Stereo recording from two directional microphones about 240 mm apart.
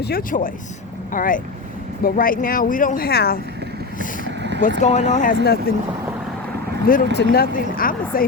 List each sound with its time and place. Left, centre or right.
0.0 s speech: left
3.9 s vehicle: left
4.3 s vehicle: right
4.8 s speech: left
6.8 s speech: left